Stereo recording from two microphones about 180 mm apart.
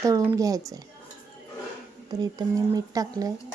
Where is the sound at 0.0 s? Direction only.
15° right (ahead or behind).